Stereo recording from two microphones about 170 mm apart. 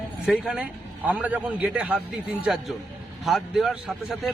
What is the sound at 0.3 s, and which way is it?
A man's voice, 5° right (ahead or behind).